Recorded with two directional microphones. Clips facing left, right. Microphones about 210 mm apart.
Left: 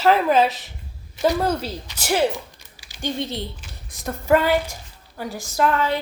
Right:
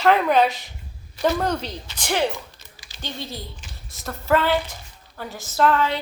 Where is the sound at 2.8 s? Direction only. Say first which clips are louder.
Left 7 dB; 15° left (ahead or behind).